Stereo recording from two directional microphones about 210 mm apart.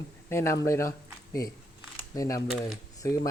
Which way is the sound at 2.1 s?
15° left (ahead or behind).